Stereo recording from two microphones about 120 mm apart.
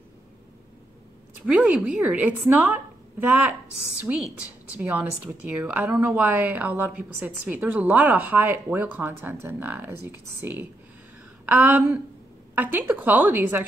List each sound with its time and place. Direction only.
1.4 s a woman's voice: 5° right (ahead or behind)